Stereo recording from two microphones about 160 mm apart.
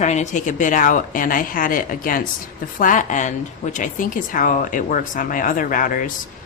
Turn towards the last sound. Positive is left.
turn(degrees=60)  # may be behind; listen again after turning